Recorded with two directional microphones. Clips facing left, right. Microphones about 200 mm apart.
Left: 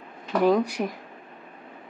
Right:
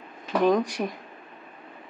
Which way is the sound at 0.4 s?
10° left (ahead or behind).